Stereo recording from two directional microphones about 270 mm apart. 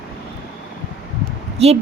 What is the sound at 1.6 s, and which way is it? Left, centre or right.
Speech, right.